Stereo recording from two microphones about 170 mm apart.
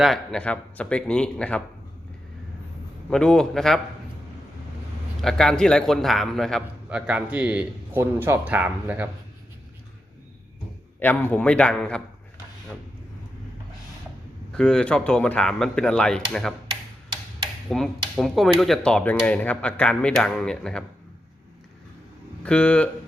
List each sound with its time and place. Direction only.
0.0 s a man's voice: centre (ahead or behind)
3.1 s a man's voice: 5° left (ahead or behind)
5.2 s a man's voice: 5° left (ahead or behind)
11.0 s a man's voice: 10° left (ahead or behind)
14.5 s a man's voice: 5° left (ahead or behind)
17.7 s a man's voice: centre (ahead or behind)
22.4 s a man's voice: 5° left (ahead or behind)